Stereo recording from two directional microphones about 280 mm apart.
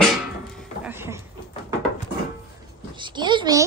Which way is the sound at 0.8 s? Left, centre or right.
Centre.